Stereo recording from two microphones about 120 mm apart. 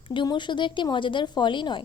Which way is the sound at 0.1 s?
40° left (ahead or behind).